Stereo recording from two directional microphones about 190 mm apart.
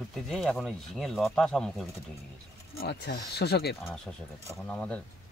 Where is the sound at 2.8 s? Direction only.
55° left (ahead or behind).